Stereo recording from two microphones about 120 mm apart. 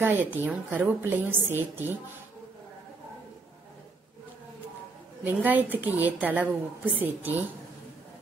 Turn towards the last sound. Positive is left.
turn(degrees=-15)  # may be behind; listen again after turning